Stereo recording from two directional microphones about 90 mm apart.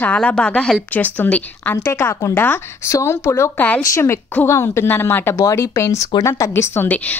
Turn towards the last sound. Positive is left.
turn(degrees=20)  # may be behind; listen again after turning